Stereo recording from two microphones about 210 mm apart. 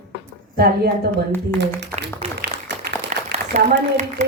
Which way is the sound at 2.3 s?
55° right (ahead or behind).